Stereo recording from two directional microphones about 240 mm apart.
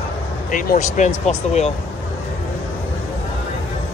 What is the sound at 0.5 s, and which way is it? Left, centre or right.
Speech, left.